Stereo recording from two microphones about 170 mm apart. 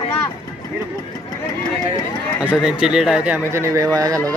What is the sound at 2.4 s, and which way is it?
Speech, 10° left (ahead or behind).